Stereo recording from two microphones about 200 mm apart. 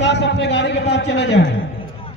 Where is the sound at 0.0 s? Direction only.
60° left (ahead or behind).